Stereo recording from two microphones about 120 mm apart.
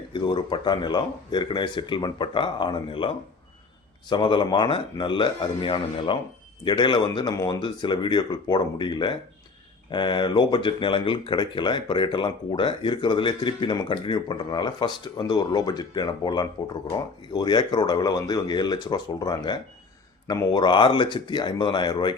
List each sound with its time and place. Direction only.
0.1 s speech: 40° left (ahead or behind)